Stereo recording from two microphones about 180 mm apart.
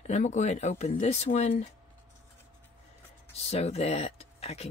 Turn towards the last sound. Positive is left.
turn(degrees=35)  # may be behind; listen again after turning